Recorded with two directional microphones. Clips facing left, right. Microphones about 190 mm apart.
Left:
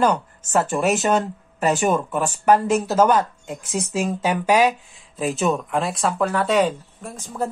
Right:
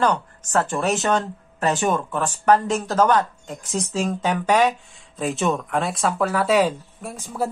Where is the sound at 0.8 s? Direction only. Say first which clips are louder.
Left 2 dB; 5° left (ahead or behind).